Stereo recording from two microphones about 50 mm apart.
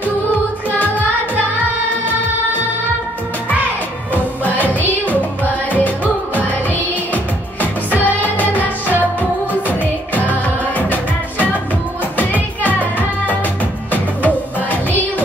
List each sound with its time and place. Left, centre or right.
0.7 s music: left
4.1 s music: left
7.9 s music: left
9.7 s music: left
13.9 s music: left